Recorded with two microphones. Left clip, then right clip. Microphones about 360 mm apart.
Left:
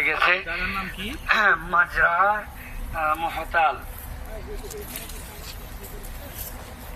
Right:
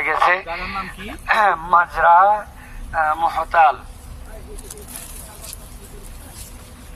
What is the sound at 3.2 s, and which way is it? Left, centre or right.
Speech, right.